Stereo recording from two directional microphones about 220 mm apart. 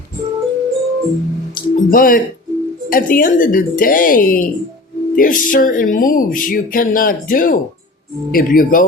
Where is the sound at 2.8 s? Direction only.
40° left (ahead or behind).